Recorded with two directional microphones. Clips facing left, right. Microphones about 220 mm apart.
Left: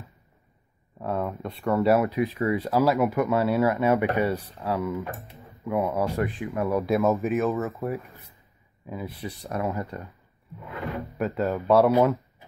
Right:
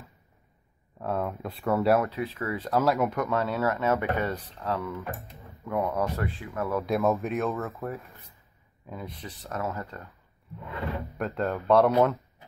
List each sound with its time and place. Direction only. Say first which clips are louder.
0.9 s speech: left 1 dB; centre (ahead or behind)
2.0 s speech: left 7 dB; 15° left (ahead or behind)
2.7 s speech: left 1 dB; centre (ahead or behind)
5.7 s speech: left 3 dB; centre (ahead or behind)
6.0 s speech: left 5 dB; 15° left (ahead or behind)
6.9 s speech: left 2 dB; centre (ahead or behind)
11.1 s speech: left 4 dB; centre (ahead or behind)